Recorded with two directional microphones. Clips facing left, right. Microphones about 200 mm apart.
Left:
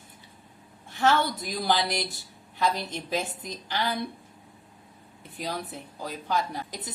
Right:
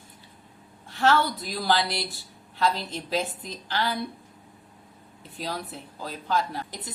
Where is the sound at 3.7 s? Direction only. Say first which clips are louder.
Right 1 dB; 15° left (ahead or behind).